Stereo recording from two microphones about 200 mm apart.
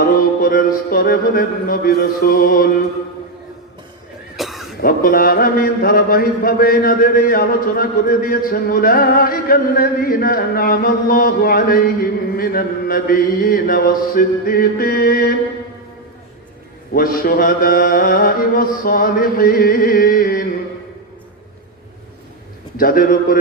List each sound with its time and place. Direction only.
0.2 s a man's voice: 45° left (ahead or behind)
4.4 s a sound: centre (ahead or behind)
4.8 s a man's voice: 45° left (ahead or behind)
16.9 s a man's voice: 45° left (ahead or behind)
22.8 s a man's voice: 45° left (ahead or behind)